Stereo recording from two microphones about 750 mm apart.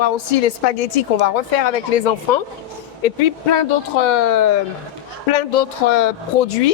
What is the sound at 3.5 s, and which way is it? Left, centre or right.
A woman's voice, left.